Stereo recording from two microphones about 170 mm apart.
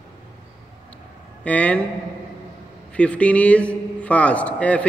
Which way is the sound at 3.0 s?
5° left (ahead or behind).